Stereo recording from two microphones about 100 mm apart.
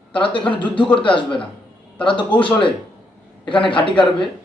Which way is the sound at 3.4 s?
55° left (ahead or behind).